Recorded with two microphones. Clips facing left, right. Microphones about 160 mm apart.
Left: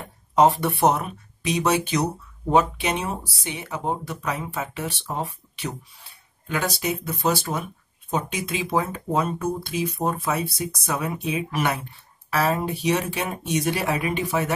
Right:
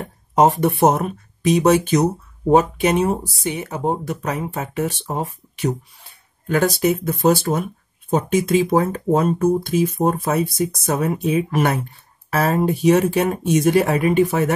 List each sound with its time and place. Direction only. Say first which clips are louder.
0.0 s speech: right 2 dB; 45° right (ahead or behind)